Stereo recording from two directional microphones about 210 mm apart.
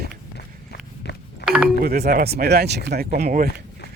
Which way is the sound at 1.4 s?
5° right (ahead or behind).